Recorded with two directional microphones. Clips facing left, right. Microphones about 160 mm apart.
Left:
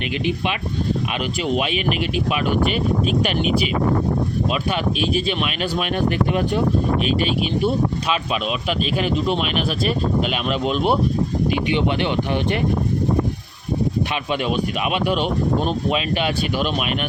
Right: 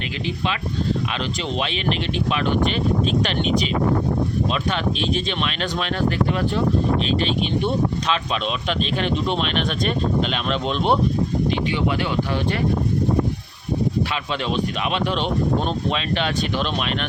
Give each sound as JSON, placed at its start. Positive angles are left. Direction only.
{"t": 1.5, "sound": "speech", "side_deg": 10}
{"t": 4.7, "sound": "speech", "side_deg": 10}
{"t": 8.8, "sound": "speech", "side_deg": 5}
{"t": 11.5, "sound": "speech", "side_deg": 20}
{"t": 14.5, "sound": "speech", "side_deg": 10}